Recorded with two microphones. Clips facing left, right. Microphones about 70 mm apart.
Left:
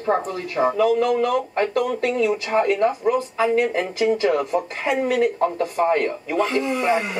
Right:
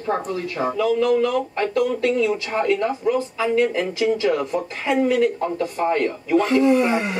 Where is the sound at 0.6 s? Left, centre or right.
Centre.